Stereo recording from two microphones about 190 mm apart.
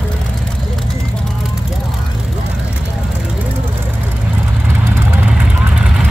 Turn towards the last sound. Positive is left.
turn(degrees=-5)  # may be behind; listen again after turning